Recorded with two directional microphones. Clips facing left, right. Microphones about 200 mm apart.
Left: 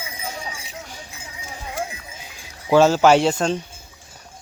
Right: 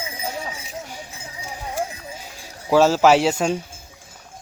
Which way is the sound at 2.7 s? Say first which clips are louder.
Left 1 dB; centre (ahead or behind).